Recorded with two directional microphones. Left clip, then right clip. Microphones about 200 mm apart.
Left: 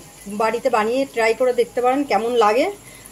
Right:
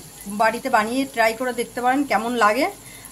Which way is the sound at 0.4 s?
15° right (ahead or behind).